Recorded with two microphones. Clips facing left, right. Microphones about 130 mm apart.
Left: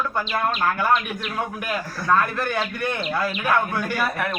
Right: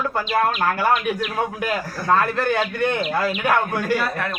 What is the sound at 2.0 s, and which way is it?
Speech, 30° right (ahead or behind).